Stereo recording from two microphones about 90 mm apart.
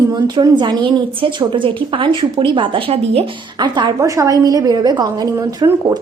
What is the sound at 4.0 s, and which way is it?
A woman's voice, 35° right (ahead or behind).